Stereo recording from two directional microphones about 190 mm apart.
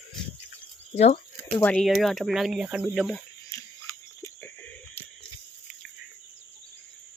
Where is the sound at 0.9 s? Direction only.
35° left (ahead or behind).